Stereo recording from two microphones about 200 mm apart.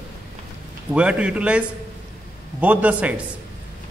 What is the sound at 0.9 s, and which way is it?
A man's voice, 5° right (ahead or behind).